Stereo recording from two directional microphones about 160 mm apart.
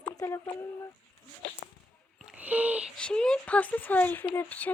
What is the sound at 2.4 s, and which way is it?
Speech, 10° right (ahead or behind).